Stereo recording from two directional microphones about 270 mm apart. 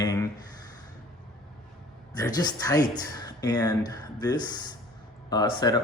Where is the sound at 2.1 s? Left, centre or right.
Centre.